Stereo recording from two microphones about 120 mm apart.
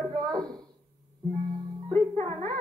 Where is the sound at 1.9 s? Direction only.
45° right (ahead or behind).